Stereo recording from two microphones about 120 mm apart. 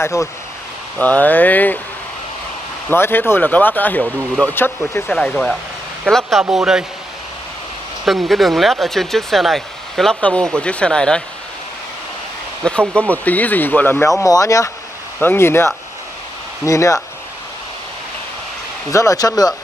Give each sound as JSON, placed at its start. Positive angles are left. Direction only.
{"t": 0.0, "sound": "speech", "side_deg": 25}
{"t": 0.9, "sound": "speech", "side_deg": 15}
{"t": 2.9, "sound": "speech", "side_deg": 15}
{"t": 5.1, "sound": "speech", "side_deg": 5}
{"t": 8.0, "sound": "speech", "side_deg": 0}
{"t": 12.6, "sound": "speech", "side_deg": 10}
{"t": 14.2, "sound": "speech", "side_deg": 25}
{"t": 18.9, "sound": "speech", "side_deg": 25}